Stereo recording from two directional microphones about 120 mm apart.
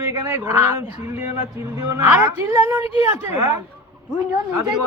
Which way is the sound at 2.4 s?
20° right (ahead or behind).